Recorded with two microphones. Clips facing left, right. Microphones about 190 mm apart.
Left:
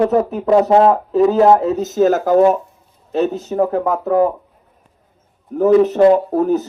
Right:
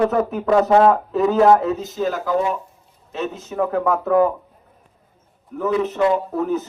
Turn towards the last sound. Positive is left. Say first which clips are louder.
# left 6 dB
turn(degrees=40)  # may be behind; listen again after turning